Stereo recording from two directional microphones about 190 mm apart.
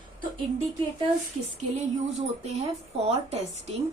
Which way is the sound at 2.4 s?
35° right (ahead or behind).